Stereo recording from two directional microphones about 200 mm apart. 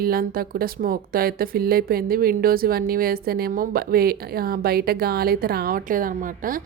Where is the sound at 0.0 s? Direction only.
45° right (ahead or behind).